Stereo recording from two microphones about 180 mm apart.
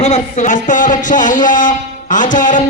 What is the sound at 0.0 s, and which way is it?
Speech, 40° left (ahead or behind).